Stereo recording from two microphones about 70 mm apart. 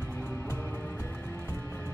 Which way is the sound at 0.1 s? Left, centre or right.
Left.